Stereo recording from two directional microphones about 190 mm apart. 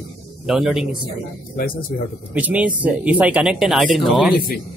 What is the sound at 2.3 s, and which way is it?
Speech, 10° right (ahead or behind).